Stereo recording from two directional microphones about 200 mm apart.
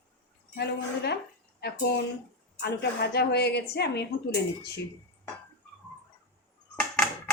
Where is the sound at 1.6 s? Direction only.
55° left (ahead or behind).